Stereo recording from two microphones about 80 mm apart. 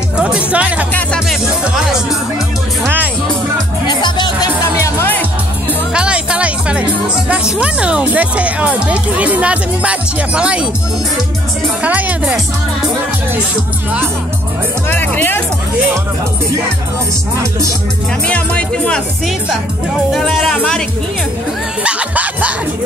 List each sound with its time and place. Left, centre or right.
0.2 s speech: centre
3.8 s music: left
4.7 s music: left
5.9 s music: centre
7.2 s speech: centre
11.8 s music: centre
14.9 s speech: left
17.4 s music: right
18.2 s music: centre
20.1 s speech: centre
21.8 s music: centre